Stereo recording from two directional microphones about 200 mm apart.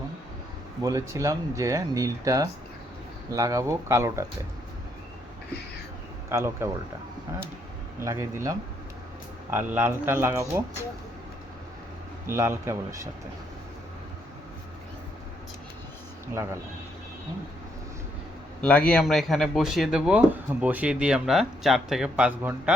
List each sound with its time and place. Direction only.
0.8 s speech: 15° right (ahead or behind)
6.2 s speech: 15° right (ahead or behind)
8.0 s speech: 15° right (ahead or behind)
12.2 s speech: 10° right (ahead or behind)
16.2 s speech: 15° right (ahead or behind)
18.9 s speech: 5° left (ahead or behind)